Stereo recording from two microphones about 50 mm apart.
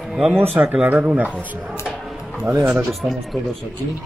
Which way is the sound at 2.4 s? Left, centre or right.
Right.